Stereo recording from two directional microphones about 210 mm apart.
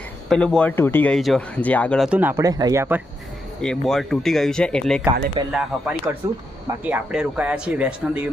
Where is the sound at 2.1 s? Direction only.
10° right (ahead or behind).